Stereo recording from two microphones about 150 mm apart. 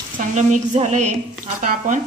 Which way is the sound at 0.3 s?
50° right (ahead or behind).